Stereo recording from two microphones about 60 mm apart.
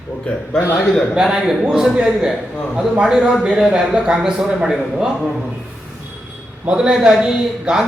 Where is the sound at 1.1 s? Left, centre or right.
Centre.